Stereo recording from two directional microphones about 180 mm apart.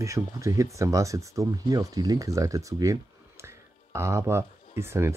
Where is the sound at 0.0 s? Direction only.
15° right (ahead or behind).